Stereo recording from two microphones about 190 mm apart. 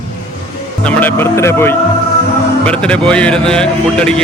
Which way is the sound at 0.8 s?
10° left (ahead or behind).